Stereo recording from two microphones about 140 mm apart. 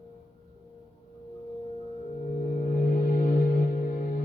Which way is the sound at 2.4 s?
80° left.